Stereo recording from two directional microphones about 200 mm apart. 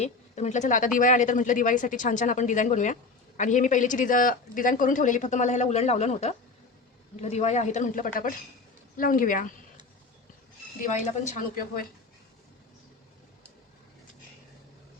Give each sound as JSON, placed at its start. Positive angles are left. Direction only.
{"t": 0.0, "sound": "a woman's voice", "side_deg": 35}
{"t": 11.2, "sound": "speech", "side_deg": 40}